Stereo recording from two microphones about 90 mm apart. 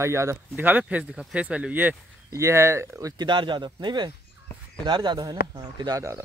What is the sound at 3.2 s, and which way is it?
Speech, 60° right (ahead or behind).